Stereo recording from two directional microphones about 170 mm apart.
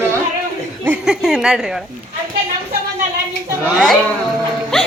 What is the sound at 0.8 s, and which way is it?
Speech, 5° right (ahead or behind).